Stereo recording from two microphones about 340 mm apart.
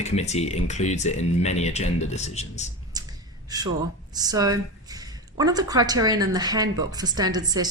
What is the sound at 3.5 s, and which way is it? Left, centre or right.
A woman's voice, centre.